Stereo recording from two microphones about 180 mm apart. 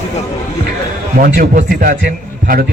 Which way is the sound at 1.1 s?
50° right (ahead or behind).